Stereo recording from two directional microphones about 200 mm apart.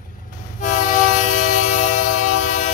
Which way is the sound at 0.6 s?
40° left (ahead or behind).